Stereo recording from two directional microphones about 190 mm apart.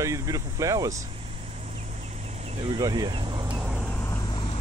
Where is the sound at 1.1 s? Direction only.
30° right (ahead or behind).